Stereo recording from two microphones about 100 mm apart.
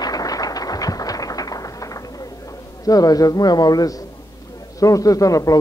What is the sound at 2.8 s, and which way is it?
A man's voice, 40° left (ahead or behind).